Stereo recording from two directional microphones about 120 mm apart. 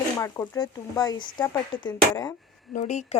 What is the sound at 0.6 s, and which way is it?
A woman's voice, 35° left (ahead or behind).